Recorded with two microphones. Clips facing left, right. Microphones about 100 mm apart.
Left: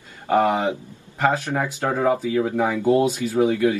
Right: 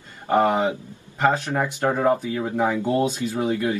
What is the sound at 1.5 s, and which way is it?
Speech, 10° right (ahead or behind).